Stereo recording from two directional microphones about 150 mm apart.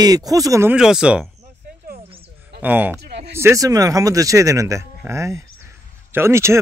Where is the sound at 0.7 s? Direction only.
5° right (ahead or behind).